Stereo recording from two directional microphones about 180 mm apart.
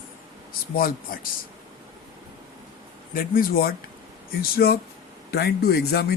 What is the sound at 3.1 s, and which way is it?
Speech, 50° left (ahead or behind).